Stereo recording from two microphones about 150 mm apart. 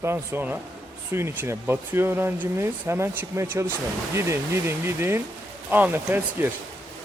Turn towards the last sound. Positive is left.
turn(degrees=-15)  # may be behind; listen again after turning